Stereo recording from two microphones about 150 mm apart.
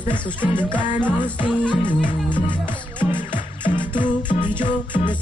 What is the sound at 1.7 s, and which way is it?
Music, 30° left (ahead or behind).